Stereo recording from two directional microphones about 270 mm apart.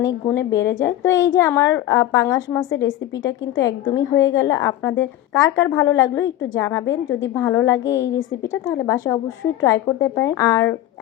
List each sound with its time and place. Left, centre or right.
0.0 s a woman's voice: centre
3.6 s a woman's voice: centre